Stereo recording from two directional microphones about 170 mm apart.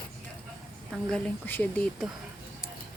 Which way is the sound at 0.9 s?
5° left (ahead or behind).